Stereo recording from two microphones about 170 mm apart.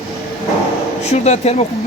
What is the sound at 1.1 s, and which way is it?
Speech, 40° left (ahead or behind).